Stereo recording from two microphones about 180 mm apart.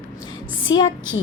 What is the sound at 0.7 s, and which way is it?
Speech, 90° left.